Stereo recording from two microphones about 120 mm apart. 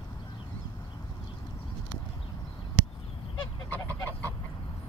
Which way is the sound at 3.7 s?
15° left (ahead or behind).